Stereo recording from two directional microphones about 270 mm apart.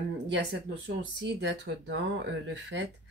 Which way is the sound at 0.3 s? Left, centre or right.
Right.